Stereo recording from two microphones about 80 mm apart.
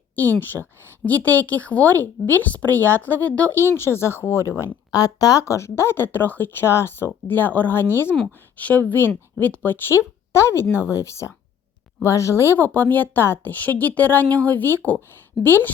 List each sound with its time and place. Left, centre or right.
0.3 s speech: left
3.8 s speech: left
4.9 s speech: left
12.5 s speech: left